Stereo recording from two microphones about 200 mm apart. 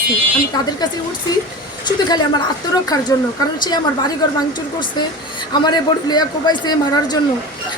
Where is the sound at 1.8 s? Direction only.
20° left (ahead or behind).